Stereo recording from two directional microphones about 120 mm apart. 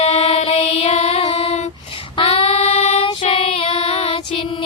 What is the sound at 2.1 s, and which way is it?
Female singing, 45° left (ahead or behind).